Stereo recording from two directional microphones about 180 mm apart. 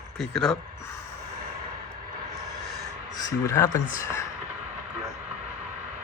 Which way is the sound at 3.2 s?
15° left (ahead or behind).